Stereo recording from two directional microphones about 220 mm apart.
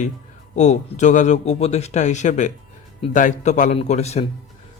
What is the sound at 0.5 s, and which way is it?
Speech, 30° left (ahead or behind).